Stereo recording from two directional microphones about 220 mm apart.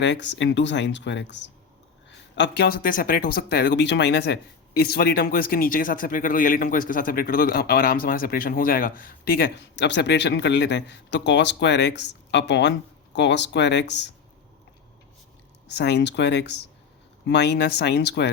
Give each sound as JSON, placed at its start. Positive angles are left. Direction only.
{"t": 0.0, "sound": "speech", "side_deg": 55}
{"t": 15.6, "sound": "speech", "side_deg": 50}